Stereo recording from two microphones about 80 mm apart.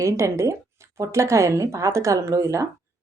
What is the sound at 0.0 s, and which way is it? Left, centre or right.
Speech, right.